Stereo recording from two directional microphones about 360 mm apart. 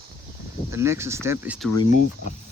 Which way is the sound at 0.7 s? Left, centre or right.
Centre.